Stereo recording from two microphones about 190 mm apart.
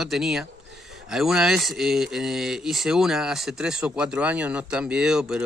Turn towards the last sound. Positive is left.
turn(degrees=-5)  # may be behind; listen again after turning